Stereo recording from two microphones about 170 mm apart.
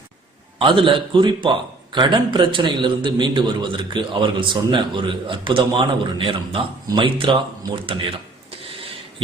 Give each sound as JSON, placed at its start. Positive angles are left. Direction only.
{"t": 0.6, "sound": "a man's voice", "side_deg": -30}